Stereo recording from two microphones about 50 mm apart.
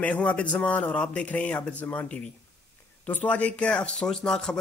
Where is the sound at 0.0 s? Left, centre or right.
Left.